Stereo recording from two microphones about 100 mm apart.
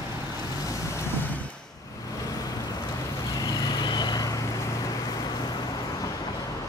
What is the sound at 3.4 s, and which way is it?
Vehicle, 40° left (ahead or behind).